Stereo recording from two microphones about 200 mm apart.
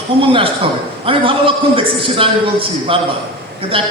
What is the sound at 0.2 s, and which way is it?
A man's voice, 25° right (ahead or behind).